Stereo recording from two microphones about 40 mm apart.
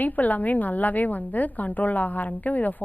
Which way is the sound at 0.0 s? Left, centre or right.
Left.